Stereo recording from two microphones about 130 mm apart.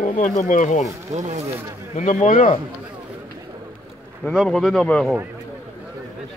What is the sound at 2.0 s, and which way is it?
Speech, 70° left (ahead or behind).